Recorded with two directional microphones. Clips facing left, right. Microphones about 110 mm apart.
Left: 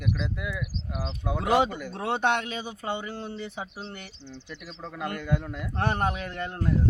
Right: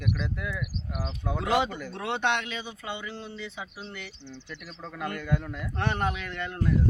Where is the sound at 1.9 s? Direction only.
35° left (ahead or behind).